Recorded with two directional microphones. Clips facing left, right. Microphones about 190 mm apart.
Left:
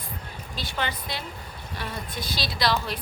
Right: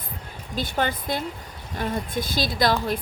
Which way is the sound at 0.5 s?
50° right (ahead or behind).